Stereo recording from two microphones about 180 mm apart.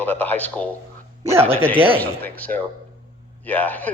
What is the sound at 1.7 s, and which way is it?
Speech, 30° right (ahead or behind).